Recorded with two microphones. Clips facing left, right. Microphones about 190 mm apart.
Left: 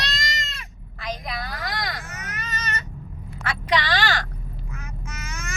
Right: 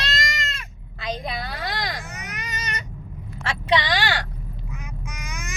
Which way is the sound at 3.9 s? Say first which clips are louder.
Even; 15° right (ahead or behind).